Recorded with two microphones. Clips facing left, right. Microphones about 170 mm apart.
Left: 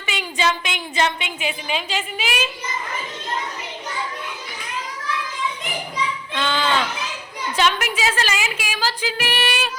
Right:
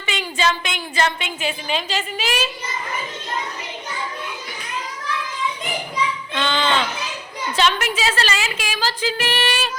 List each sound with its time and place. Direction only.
0.0 s a woman's voice: 10° left (ahead or behind)
6.3 s a sound: 5° left (ahead or behind)
7.5 s a woman's voice: 10° left (ahead or behind)